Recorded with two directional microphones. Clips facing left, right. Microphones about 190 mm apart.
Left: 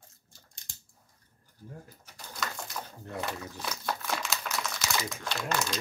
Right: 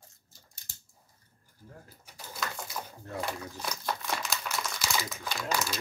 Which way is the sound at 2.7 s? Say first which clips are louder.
Even; centre (ahead or behind).